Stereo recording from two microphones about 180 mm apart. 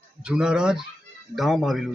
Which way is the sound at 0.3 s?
5° right (ahead or behind).